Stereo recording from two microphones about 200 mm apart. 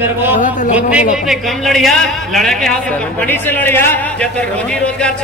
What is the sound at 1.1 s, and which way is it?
A man's voice, centre (ahead or behind).